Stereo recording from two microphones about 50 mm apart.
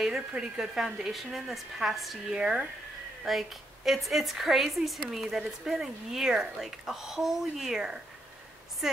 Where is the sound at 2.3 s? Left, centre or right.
Centre.